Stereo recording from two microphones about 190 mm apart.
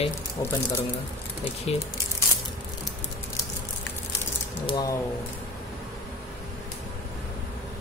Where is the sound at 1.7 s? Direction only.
30° left (ahead or behind).